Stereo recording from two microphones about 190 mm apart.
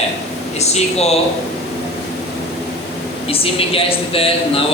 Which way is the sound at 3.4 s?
30° left (ahead or behind).